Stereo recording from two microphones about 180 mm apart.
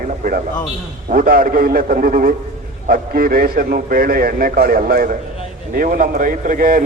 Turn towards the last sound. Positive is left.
turn(degrees=-50)  # may be behind; listen again after turning